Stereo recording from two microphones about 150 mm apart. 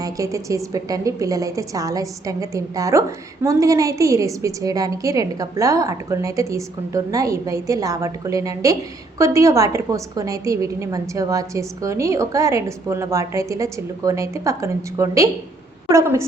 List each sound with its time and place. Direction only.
0.0 s a woman's voice: 20° right (ahead or behind)